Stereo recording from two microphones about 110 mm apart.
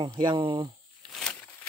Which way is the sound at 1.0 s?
5° left (ahead or behind).